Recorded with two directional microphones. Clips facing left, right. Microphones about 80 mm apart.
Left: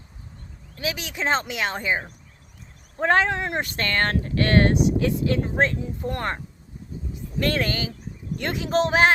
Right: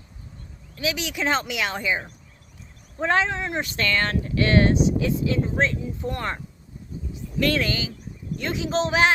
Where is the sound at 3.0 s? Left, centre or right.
Left.